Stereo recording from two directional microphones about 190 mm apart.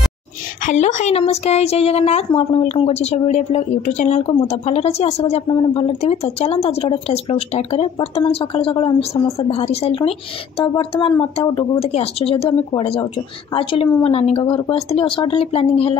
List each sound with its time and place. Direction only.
0.7 s a woman's voice: 40° left (ahead or behind)